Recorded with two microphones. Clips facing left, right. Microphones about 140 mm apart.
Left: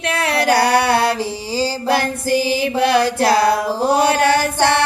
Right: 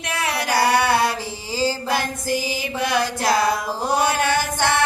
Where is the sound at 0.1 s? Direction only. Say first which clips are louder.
Left 6 dB; 65° left (ahead or behind).